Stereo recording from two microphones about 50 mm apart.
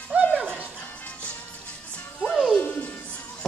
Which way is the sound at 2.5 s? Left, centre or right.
Left.